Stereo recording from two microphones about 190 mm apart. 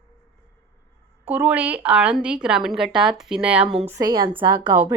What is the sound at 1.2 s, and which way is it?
A woman's voice, 10° right (ahead or behind).